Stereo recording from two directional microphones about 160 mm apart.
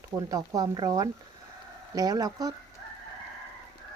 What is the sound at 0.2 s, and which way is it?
Speech, 20° right (ahead or behind).